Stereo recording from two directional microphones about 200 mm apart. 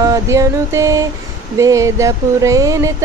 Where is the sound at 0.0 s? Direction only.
15° right (ahead or behind).